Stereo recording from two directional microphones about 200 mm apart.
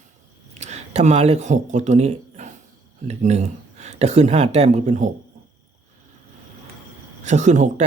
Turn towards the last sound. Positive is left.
turn(degrees=-35)  # may be behind; listen again after turning